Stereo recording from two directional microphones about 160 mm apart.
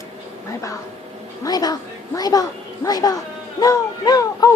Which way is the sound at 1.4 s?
25° left (ahead or behind).